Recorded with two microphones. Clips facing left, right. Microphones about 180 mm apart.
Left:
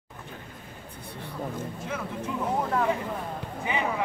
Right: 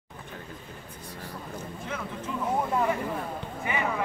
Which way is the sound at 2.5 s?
10° right (ahead or behind).